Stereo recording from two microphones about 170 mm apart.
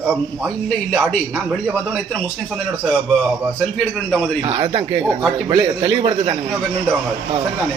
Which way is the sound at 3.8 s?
5° left (ahead or behind).